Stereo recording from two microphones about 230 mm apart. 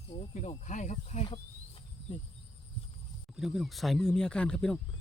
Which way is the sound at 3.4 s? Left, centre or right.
Centre.